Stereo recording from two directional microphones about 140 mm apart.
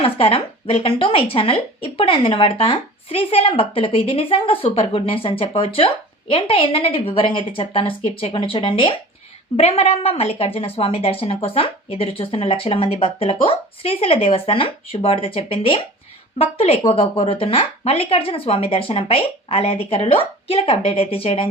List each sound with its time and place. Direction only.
0.0 s a woman's voice: 40° left (ahead or behind)